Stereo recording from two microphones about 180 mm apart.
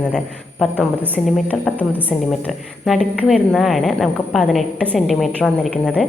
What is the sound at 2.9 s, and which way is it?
A woman's voice, centre (ahead or behind).